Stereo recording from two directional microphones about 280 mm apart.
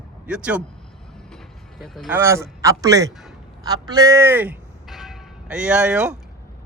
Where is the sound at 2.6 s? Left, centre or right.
Centre.